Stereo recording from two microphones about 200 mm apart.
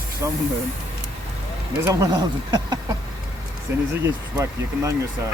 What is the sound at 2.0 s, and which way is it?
Speech, 20° right (ahead or behind).